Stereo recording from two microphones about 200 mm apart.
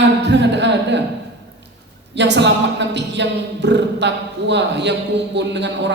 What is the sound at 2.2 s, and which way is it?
A man's voice, 60° right (ahead or behind).